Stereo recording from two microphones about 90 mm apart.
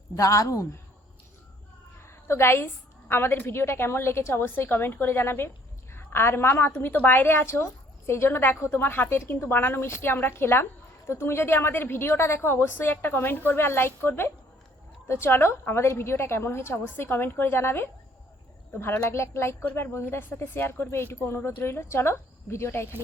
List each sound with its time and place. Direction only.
0.2 s a woman's voice: 35° left (ahead or behind)
2.0 s a sound: 30° left (ahead or behind)
3.1 s a woman's voice: 25° left (ahead or behind)